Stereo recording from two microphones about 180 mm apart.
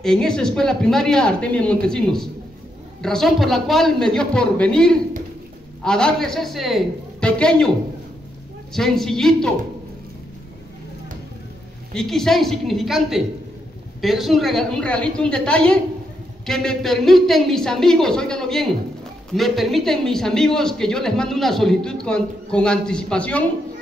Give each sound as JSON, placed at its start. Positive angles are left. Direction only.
{"t": 0.0, "sound": "speech", "side_deg": 5}
{"t": 8.7, "sound": "speech", "side_deg": 0}
{"t": 11.9, "sound": "speech", "side_deg": 0}